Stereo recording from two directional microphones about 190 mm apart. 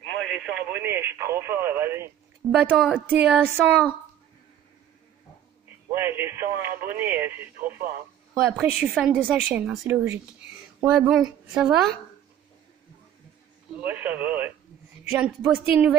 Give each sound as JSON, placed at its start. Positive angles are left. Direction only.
{"t": 0.0, "sound": "speech", "side_deg": 5}
{"t": 5.9, "sound": "a woman's voice", "side_deg": -15}
{"t": 13.7, "sound": "a woman's voice", "side_deg": -10}